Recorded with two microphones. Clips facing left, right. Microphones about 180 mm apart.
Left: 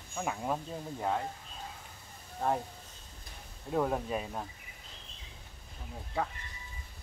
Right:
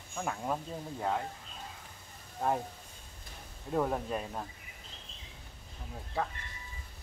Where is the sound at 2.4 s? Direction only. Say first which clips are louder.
Even; centre (ahead or behind).